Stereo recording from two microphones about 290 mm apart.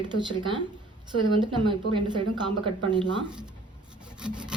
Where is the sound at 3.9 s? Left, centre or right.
Centre.